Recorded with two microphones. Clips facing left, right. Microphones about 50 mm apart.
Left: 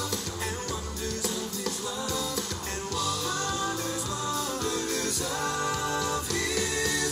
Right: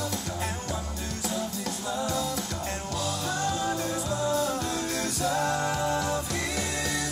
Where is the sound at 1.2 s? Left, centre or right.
Right.